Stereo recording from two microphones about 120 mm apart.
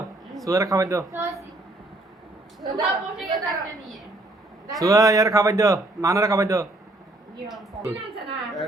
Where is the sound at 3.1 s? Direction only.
Centre (ahead or behind).